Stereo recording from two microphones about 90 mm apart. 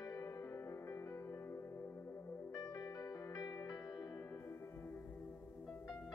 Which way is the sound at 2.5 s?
45° left (ahead or behind).